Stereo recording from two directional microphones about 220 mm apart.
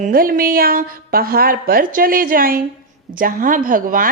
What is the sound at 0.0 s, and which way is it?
A woman's voice, 40° right (ahead or behind).